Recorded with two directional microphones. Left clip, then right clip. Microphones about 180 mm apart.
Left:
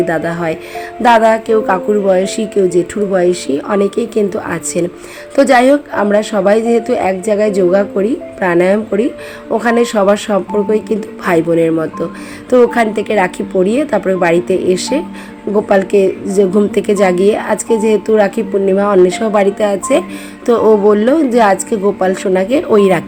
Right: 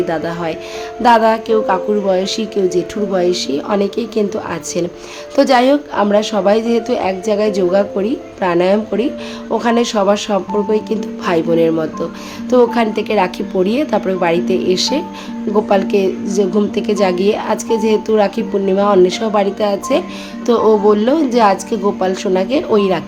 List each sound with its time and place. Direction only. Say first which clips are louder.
0.0 s a woman's voice: left 3 dB; 15° left (ahead or behind)